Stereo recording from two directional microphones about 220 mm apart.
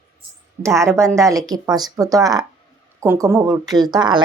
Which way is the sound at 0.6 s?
15° right (ahead or behind).